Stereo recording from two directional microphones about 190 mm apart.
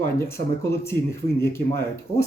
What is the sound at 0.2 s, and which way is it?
Speech, 15° left (ahead or behind).